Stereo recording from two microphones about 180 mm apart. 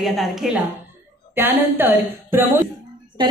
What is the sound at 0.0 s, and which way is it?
Speech, centre (ahead or behind).